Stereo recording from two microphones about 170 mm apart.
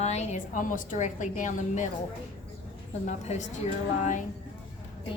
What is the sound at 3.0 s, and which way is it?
Speech, 45° left (ahead or behind).